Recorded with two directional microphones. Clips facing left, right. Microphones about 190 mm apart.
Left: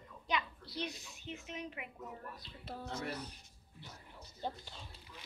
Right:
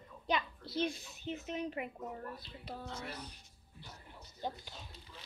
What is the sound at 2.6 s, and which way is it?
Music, 5° left (ahead or behind).